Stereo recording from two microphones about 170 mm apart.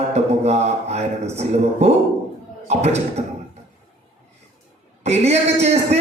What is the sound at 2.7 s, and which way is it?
Speech, 40° right (ahead or behind).